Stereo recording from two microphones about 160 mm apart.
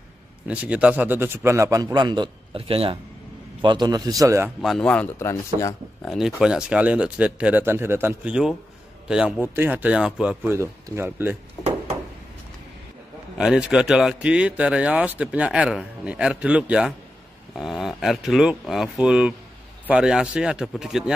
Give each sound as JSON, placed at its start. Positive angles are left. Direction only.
{"t": 0.5, "sound": "a man's voice", "side_deg": -10}
{"t": 4.6, "sound": "speech", "side_deg": 5}
{"t": 6.0, "sound": "a man's voice", "side_deg": 0}
{"t": 11.6, "sound": "a sound", "side_deg": 20}
{"t": 13.4, "sound": "a man's voice", "side_deg": -5}